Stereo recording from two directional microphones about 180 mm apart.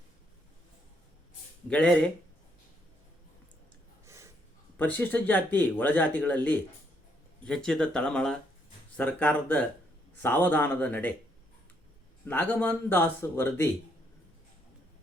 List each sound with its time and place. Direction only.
1.7 s speech: 5° left (ahead or behind)
4.0 s gasp: 15° right (ahead or behind)
4.8 s speech: 10° left (ahead or behind)
12.2 s speech: 10° left (ahead or behind)